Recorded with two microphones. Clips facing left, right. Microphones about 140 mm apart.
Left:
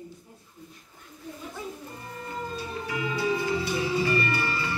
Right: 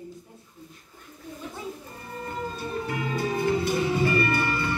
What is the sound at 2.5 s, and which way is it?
Music, 55° right (ahead or behind).